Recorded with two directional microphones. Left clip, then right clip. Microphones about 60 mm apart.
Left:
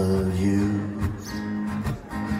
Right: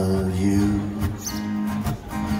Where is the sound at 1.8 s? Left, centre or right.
Right.